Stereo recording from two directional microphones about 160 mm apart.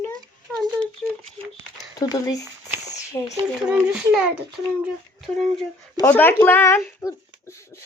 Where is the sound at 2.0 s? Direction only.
25° left (ahead or behind).